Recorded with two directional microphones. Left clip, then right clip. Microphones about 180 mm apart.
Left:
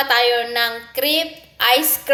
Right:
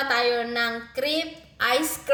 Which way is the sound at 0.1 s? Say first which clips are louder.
Left 7 dB; 20° right (ahead or behind).